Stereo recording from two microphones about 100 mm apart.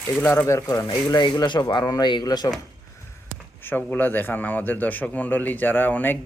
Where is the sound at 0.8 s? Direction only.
45° left (ahead or behind).